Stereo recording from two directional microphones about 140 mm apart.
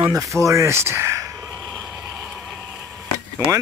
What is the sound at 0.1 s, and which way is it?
Speech, 20° right (ahead or behind).